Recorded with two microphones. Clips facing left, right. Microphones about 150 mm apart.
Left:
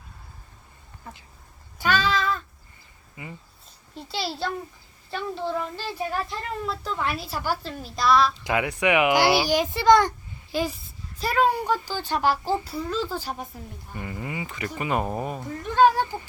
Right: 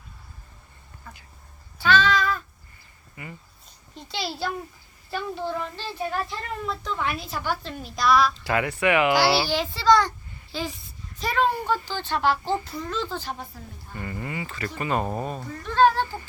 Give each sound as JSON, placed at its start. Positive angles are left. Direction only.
{"t": 1.8, "sound": "a sound", "side_deg": 10}
{"t": 3.9, "sound": "a child's voice", "side_deg": 0}
{"t": 8.4, "sound": "speech", "side_deg": 15}
{"t": 10.6, "sound": "speech", "side_deg": 5}